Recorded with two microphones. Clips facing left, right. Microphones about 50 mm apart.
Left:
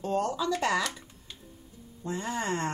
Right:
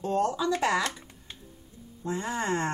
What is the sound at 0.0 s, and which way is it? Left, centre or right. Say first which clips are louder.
Speech: right 2 dB; centre.